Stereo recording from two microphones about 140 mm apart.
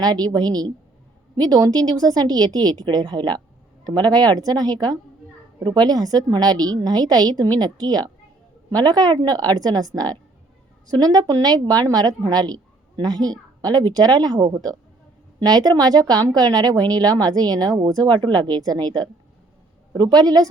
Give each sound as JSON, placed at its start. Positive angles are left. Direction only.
{"t": 0.0, "sound": "a woman's voice", "side_deg": -30}